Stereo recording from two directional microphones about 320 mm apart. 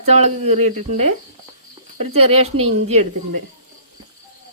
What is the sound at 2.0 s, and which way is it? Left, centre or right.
Speech, centre.